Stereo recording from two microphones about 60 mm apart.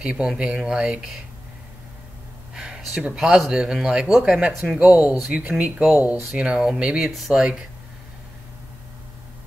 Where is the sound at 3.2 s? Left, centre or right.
Centre.